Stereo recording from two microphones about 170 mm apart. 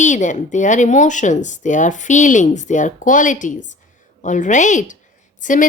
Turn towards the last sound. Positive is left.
turn(degrees=50)  # may be behind; listen again after turning